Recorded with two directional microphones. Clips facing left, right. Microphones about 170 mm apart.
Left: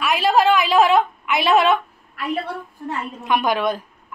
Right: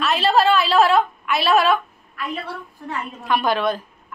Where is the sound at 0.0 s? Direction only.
10° left (ahead or behind).